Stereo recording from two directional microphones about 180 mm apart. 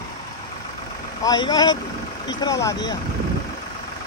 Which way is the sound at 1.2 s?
25° left (ahead or behind).